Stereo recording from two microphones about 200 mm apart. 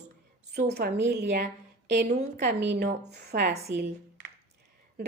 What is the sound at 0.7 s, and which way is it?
A woman's voice, 55° right (ahead or behind).